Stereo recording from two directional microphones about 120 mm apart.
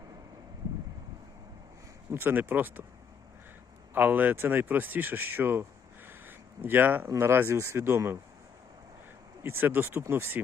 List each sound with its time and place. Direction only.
2.1 s speech: 15° right (ahead or behind)
3.9 s speech: 15° right (ahead or behind)
6.1 s a sound: 15° right (ahead or behind)
7.1 s speech: 20° right (ahead or behind)
9.4 s speech: 20° right (ahead or behind)